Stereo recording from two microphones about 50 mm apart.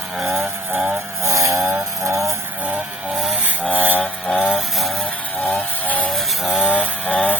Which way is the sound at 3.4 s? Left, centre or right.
Right.